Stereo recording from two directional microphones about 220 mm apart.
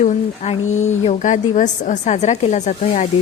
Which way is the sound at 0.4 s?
30° left (ahead or behind).